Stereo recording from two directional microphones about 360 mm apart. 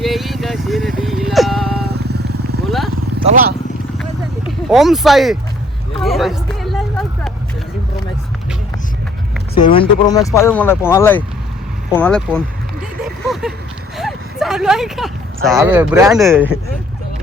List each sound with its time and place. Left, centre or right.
0.0 s vehicle: centre
1.8 s vehicle: right
2.6 s vehicle: centre
3.2 s speech: right
4.7 s speech: centre
6.0 s hubbub: centre
9.6 s speech: centre
13.2 s a sound: centre
13.9 s speech: centre